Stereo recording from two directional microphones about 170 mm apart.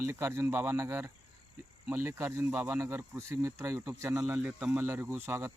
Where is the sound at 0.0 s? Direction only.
15° right (ahead or behind).